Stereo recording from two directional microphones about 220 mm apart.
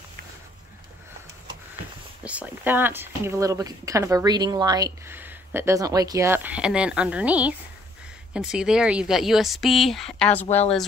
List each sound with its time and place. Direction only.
2.2 s speech: 5° right (ahead or behind)
10.5 s speech: 30° left (ahead or behind)